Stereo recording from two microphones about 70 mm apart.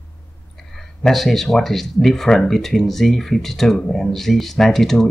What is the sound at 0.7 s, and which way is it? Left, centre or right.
Speech, centre.